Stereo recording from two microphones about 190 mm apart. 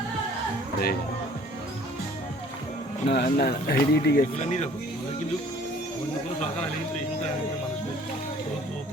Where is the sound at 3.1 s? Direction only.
55° left (ahead or behind).